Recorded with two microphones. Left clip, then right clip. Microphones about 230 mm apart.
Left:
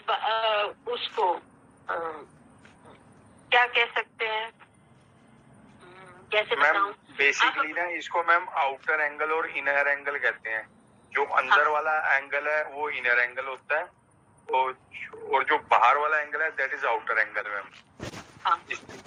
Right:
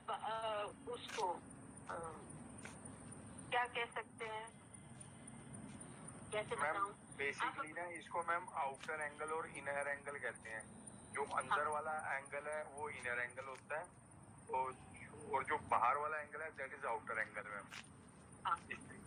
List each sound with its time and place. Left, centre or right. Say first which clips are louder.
0.0 s radio: left 17 dB; left
1.9 s speech: left 17 dB; left
3.5 s telephone: left 18 dB; left
6.3 s speech: left 18 dB; left